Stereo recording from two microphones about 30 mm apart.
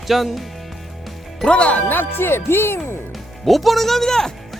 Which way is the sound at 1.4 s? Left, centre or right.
Left.